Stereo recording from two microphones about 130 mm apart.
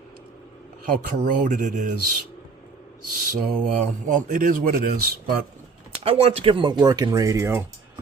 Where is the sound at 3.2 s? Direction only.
85° right.